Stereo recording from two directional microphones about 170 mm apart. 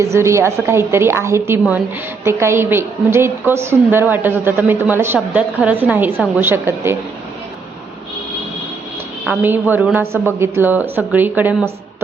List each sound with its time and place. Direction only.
0.0 s a woman's voice: 15° right (ahead or behind)
9.2 s a woman's voice: 10° right (ahead or behind)